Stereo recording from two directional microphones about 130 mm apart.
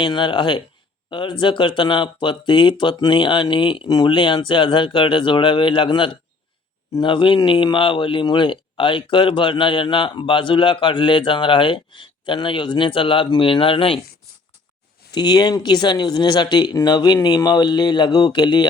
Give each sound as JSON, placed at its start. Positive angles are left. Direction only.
{"t": 0.0, "sound": "speech", "side_deg": 35}
{"t": 15.1, "sound": "speech", "side_deg": 30}